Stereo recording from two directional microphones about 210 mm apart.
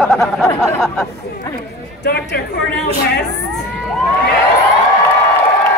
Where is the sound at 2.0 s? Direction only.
50° left (ahead or behind).